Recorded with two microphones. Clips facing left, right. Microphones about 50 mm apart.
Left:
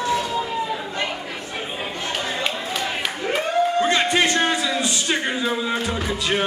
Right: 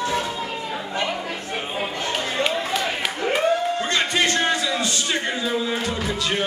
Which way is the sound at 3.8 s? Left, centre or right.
Centre.